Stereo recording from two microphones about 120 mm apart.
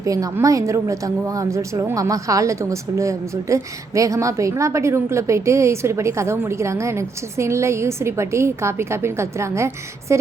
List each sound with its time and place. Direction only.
0.0 s a woman's voice: 25° right (ahead or behind)